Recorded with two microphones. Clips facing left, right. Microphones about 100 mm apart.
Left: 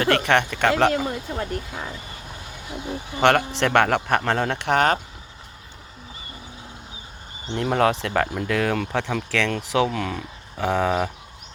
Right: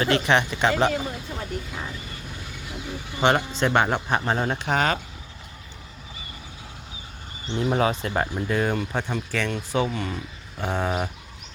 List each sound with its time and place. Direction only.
0.0 s speech: 55° left (ahead or behind)
0.7 s speech: 80° left
3.2 s speech: 70° left (ahead or behind)
7.5 s speech: 60° left (ahead or behind); by 11.1 s 90° left